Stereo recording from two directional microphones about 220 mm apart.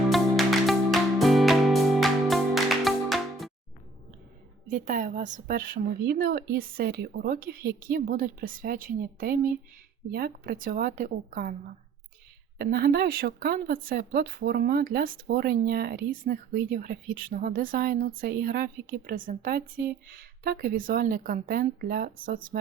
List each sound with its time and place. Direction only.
0.1 s music: centre (ahead or behind)
4.7 s speech: 35° right (ahead or behind)
12.5 s speech: 45° right (ahead or behind)